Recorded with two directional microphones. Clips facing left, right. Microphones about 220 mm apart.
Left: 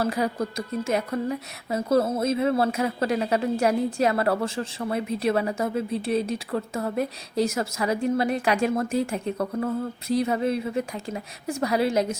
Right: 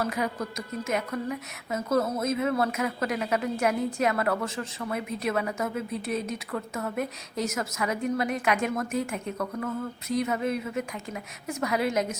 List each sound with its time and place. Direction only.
0.0 s speech: 35° left (ahead or behind)